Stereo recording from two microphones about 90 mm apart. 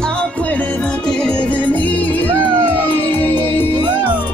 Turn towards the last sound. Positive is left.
turn(degrees=20)  # may be behind; listen again after turning